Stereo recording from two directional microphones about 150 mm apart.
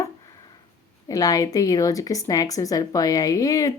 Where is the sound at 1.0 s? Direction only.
25° left (ahead or behind).